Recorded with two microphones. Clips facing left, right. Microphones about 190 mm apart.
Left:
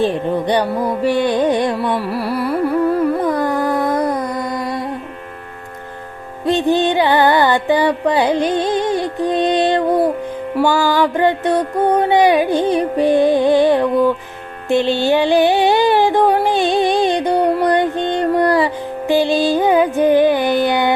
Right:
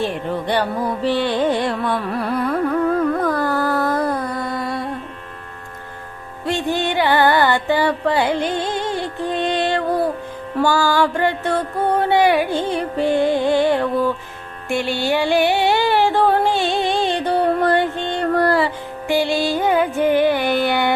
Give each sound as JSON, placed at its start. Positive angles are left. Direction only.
{"t": 0.0, "sound": "carnatic music", "side_deg": 15}
{"t": 2.0, "sound": "music", "side_deg": 10}
{"t": 6.4, "sound": "music", "side_deg": 20}
{"t": 14.7, "sound": "a sound", "side_deg": 20}